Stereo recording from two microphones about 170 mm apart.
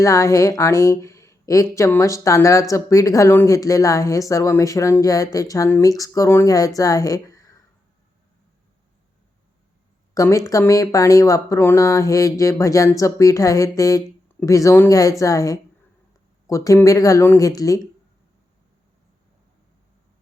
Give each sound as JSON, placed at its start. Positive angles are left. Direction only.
{"t": 0.0, "sound": "a woman's voice", "side_deg": 20}
{"t": 10.2, "sound": "a woman's voice", "side_deg": 20}